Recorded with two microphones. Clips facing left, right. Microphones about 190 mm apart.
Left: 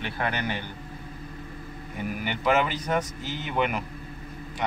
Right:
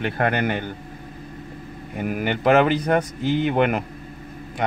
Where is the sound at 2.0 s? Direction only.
55° right (ahead or behind).